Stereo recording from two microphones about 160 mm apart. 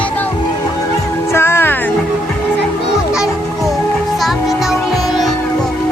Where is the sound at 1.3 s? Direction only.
15° left (ahead or behind).